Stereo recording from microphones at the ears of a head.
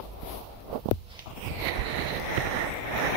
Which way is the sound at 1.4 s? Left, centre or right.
Right.